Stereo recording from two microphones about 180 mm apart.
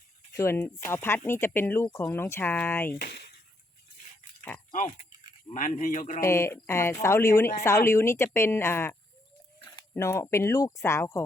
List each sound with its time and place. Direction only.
0.3 s speech: 15° left (ahead or behind)
2.9 s speech: 60° left (ahead or behind)
4.7 s speech: 40° left (ahead or behind)
6.2 s speech: 15° left (ahead or behind)